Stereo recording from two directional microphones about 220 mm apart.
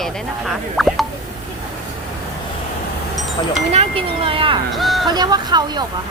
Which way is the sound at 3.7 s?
25° right (ahead or behind).